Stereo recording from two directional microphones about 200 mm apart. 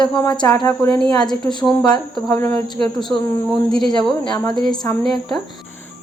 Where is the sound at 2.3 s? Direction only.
15° left (ahead or behind).